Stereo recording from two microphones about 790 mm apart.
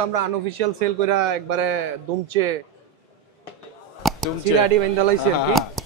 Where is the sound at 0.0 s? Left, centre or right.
Right.